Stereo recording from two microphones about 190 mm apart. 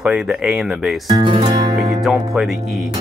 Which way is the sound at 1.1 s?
25° right (ahead or behind).